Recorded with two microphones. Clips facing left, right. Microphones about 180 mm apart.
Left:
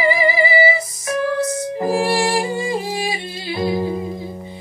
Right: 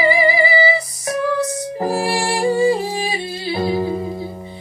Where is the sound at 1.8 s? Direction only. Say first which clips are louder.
Left 2 dB; 35° right (ahead or behind).